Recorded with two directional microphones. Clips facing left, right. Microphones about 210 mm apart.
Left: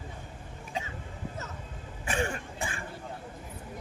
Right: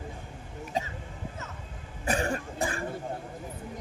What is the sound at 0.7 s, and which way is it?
Cough, 40° right (ahead or behind).